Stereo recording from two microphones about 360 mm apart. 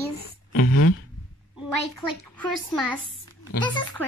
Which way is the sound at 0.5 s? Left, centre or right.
Left.